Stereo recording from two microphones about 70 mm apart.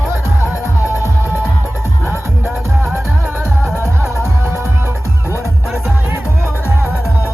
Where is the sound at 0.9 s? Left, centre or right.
Left.